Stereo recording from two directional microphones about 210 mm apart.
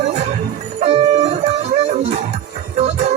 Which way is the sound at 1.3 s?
30° right (ahead or behind).